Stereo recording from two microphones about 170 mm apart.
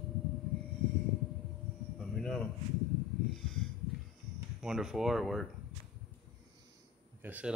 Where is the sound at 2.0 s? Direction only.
5° left (ahead or behind).